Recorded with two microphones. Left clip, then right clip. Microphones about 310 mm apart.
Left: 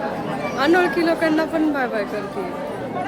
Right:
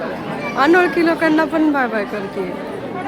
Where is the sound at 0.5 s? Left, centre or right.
Centre.